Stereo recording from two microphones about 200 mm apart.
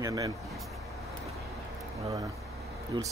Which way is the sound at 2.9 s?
25° right (ahead or behind).